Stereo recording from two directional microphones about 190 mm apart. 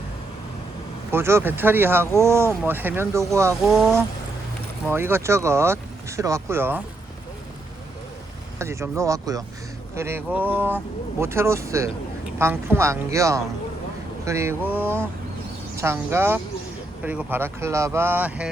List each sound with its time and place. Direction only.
1.1 s speech: 10° right (ahead or behind)
3.6 s speech: centre (ahead or behind)
4.9 s speech: 10° right (ahead or behind)
8.5 s speech: 15° right (ahead or behind)